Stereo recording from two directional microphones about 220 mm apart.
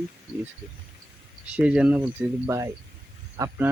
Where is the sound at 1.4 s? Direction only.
5° right (ahead or behind).